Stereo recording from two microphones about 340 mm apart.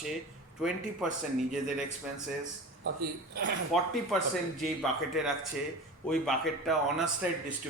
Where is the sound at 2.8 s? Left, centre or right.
Right.